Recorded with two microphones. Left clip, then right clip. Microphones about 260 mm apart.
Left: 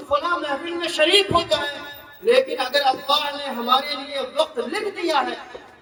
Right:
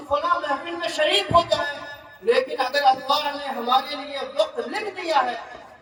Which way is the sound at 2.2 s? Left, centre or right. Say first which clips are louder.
Left 3 dB; centre.